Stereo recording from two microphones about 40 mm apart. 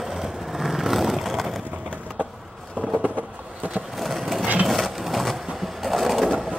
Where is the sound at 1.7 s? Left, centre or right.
Right.